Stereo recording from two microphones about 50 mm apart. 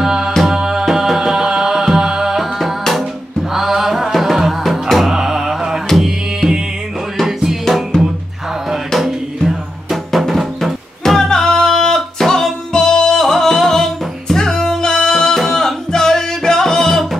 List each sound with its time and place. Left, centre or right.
0.0 s music: centre
7.6 s music: centre